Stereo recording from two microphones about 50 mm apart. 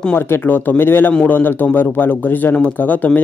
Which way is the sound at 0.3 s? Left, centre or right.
Left.